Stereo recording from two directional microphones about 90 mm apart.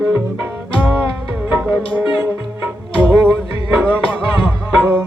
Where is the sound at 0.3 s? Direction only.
20° right (ahead or behind).